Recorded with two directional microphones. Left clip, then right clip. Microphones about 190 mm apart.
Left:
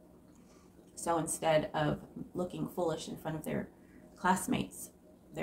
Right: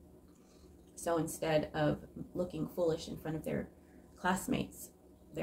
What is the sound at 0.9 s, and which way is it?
A woman's voice, 20° left (ahead or behind).